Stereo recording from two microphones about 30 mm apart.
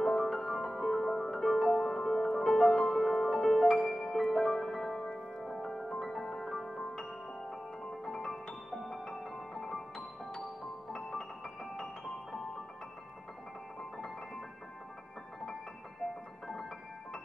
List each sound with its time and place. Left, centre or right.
0.2 s music: centre
2.9 s music: centre
3.8 s music: centre
4.2 s music: centre
8.0 s music: centre
8.6 s music: centre
9.2 s music: centre
10.9 s music: centre
13.9 s music: centre